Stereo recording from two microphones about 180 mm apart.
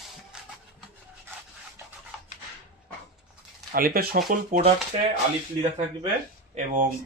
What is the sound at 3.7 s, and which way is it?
Speech, 55° right (ahead or behind).